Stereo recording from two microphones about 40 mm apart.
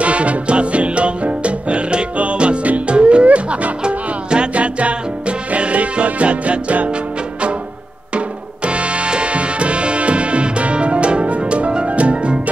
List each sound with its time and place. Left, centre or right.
0.0 s music: right
8.6 s music: right